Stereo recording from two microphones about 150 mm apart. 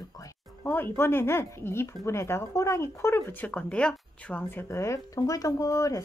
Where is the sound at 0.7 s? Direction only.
15° left (ahead or behind).